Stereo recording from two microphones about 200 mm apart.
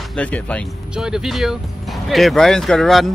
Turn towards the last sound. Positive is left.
turn(degrees=0)  # may be behind; listen again after turning